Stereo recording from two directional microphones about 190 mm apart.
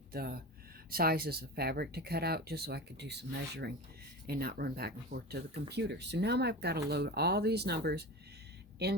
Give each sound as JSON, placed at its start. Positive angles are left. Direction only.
{"t": 0.1, "sound": "speech", "side_deg": -50}